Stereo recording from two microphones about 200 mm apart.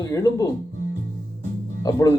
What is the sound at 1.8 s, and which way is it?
Speech, 15° left (ahead or behind).